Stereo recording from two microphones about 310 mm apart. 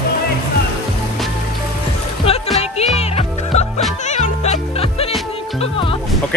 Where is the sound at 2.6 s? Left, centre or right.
Centre.